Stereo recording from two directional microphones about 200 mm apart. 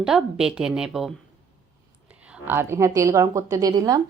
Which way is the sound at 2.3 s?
10° right (ahead or behind).